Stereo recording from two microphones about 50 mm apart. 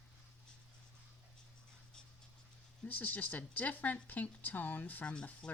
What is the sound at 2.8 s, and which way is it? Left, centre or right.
Speech, left.